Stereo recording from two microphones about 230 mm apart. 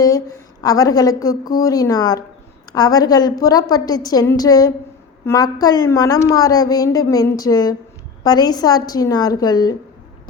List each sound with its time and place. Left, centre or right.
0.0 s a woman's voice: centre